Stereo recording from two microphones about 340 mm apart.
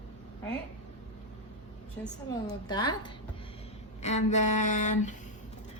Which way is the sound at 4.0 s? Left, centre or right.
Centre.